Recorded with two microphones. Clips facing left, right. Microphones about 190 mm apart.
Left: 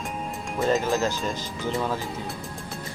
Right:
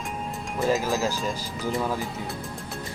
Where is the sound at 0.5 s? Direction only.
5° right (ahead or behind).